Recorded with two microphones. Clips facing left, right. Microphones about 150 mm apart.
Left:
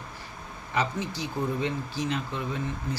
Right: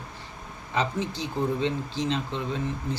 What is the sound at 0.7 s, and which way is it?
Speech, 20° right (ahead or behind).